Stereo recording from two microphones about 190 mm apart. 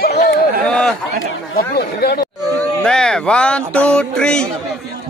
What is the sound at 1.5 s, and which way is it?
Speech, 55° left (ahead or behind).